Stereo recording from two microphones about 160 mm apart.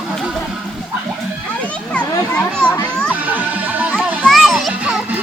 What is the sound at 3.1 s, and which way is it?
A child's voice, 10° right (ahead or behind).